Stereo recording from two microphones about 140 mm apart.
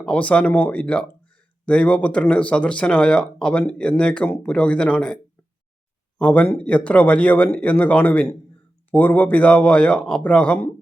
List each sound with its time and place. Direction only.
0.0 s speech: 10° left (ahead or behind)